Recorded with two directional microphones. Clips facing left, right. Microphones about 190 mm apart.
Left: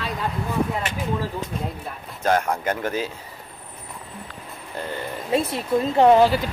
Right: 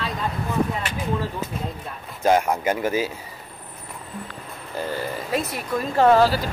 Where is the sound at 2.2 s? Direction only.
10° right (ahead or behind).